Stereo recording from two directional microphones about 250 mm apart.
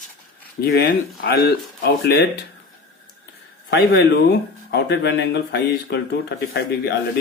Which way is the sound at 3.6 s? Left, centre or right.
Left.